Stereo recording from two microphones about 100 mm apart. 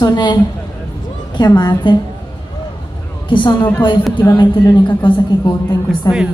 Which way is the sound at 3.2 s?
55° left (ahead or behind).